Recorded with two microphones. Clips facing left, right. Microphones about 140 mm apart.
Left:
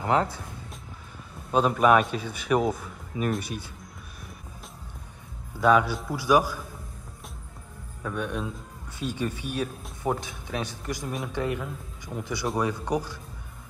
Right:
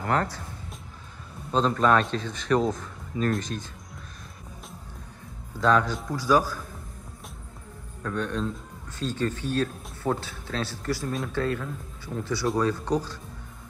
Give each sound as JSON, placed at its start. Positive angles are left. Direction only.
{"t": 0.0, "sound": "speech", "side_deg": 15}
{"t": 1.5, "sound": "a man's voice", "side_deg": 10}
{"t": 5.6, "sound": "a man's voice", "side_deg": 10}
{"t": 8.0, "sound": "a man's voice", "side_deg": 10}